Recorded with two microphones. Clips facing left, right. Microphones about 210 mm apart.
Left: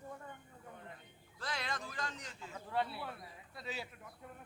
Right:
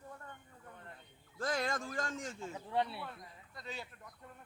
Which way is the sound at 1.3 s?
45° right (ahead or behind).